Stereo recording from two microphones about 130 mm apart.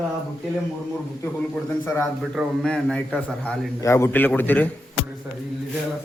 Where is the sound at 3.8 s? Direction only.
20° left (ahead or behind).